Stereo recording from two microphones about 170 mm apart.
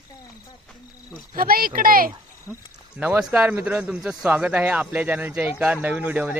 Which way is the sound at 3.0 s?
5° right (ahead or behind).